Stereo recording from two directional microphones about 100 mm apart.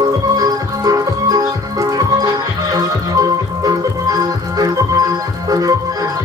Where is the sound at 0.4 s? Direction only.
35° right (ahead or behind).